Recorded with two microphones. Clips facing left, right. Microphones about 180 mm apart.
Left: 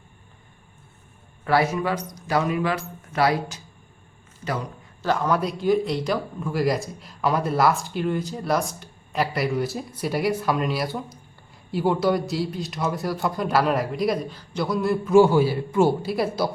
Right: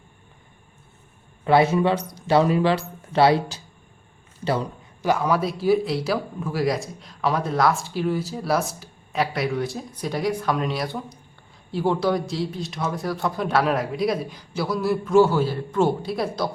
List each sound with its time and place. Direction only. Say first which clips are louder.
1.5 s speech: right 4 dB; 25° right (ahead or behind)
5.0 s speech: right 1 dB; 10° right (ahead or behind)
15.2 s a man's voice: left 1 dB; 15° left (ahead or behind)